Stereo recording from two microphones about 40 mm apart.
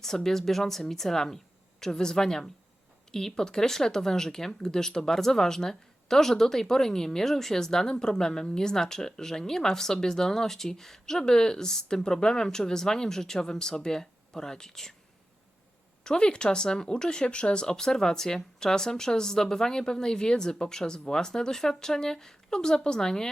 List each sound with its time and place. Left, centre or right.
0.0 s speech: centre
16.0 s speech: left